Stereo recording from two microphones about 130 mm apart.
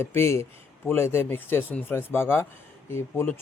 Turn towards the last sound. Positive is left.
turn(degrees=15)  # may be behind; listen again after turning